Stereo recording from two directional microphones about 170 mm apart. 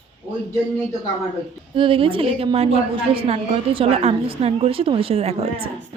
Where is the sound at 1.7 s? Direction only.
30° right (ahead or behind).